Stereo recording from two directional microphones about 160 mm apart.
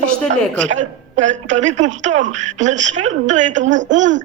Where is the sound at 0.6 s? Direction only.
50° right (ahead or behind).